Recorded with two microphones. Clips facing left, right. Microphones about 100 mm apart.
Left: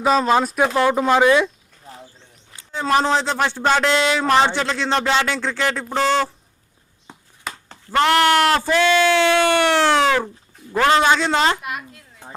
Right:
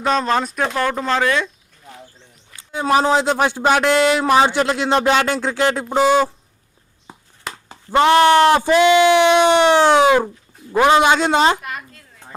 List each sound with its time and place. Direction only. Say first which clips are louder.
0.0 s speech: left 2 dB; 5° left (ahead or behind)
0.8 s speech: left 4 dB; 15° left (ahead or behind)
1.8 s bird: even; 35° left (ahead or behind)
2.7 s speech: right 2 dB; 15° right (ahead or behind)
7.1 s a sound: right 1 dB; 10° right (ahead or behind)
7.9 s a woman's voice: right 4 dB; 20° right (ahead or behind)
11.6 s a sound: left 1 dB; 10° left (ahead or behind)